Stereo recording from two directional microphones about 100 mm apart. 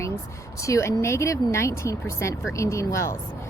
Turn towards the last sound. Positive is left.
turn(degrees=30)  # may be behind; listen again after turning